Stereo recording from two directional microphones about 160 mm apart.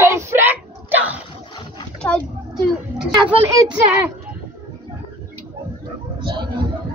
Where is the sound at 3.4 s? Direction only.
20° right (ahead or behind).